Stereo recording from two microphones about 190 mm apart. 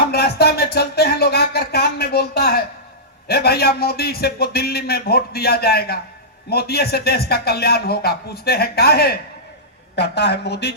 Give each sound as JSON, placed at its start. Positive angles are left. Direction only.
{"t": 0.1, "sound": "music", "side_deg": 55}
{"t": 3.2, "sound": "a man's voice", "side_deg": 55}